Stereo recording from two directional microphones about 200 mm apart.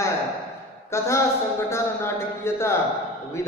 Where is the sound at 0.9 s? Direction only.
15° left (ahead or behind).